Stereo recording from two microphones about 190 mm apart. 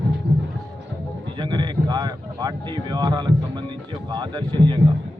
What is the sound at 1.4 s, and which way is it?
Speech, 25° right (ahead or behind).